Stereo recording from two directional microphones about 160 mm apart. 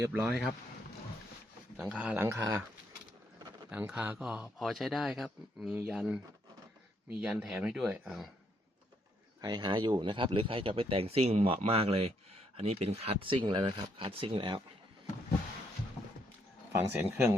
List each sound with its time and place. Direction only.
0.0 s speech: 10° right (ahead or behind)
1.7 s speech: 10° right (ahead or behind)
3.7 s speech: 5° right (ahead or behind)
7.2 s speech: 5° right (ahead or behind)
9.4 s speech: 25° right (ahead or behind)
16.9 s speech: 10° right (ahead or behind)